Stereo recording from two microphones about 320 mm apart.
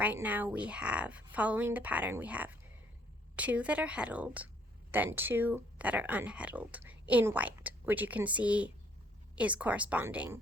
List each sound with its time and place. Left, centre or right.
0.0 s speech: centre